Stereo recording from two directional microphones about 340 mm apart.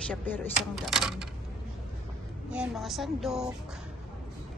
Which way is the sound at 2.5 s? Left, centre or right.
Centre.